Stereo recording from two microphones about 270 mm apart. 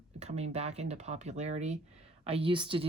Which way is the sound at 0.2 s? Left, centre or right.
Right.